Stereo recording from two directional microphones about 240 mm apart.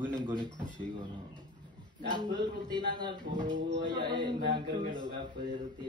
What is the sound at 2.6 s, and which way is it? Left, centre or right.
Speech, centre.